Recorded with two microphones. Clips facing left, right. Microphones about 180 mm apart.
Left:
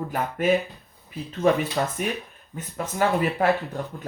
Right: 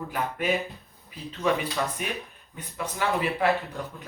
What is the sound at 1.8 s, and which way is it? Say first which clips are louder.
Speech: left 4 dB; 40° left (ahead or behind).